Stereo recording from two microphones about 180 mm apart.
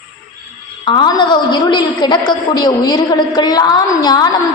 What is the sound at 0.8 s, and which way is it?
A woman's voice, 25° left (ahead or behind).